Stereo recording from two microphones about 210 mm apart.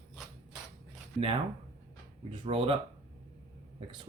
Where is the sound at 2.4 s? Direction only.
25° right (ahead or behind).